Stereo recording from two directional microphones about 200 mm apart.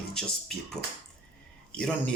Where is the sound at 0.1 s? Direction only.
5° left (ahead or behind).